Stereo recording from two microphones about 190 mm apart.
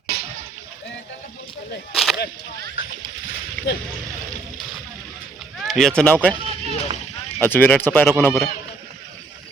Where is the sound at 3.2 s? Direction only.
80° left.